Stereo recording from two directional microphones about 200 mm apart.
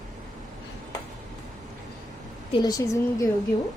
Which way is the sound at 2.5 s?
20° left (ahead or behind).